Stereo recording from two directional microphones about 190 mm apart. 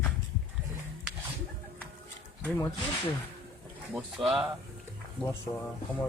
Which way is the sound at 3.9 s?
Centre (ahead or behind).